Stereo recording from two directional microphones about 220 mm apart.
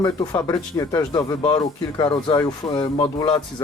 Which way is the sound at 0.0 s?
15° left (ahead or behind).